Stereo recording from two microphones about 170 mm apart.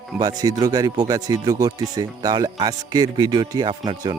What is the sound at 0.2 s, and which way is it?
Speech, 20° right (ahead or behind).